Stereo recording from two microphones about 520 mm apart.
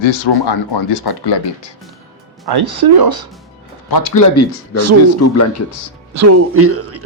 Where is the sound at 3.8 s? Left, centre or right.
Left.